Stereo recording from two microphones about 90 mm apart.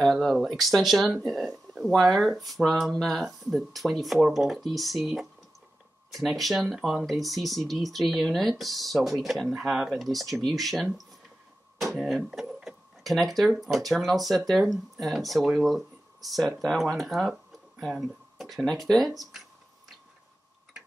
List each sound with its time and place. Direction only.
0.0 s speech: 5° left (ahead or behind)
12.3 s cash register: 5° right (ahead or behind)
13.6 s speech: centre (ahead or behind)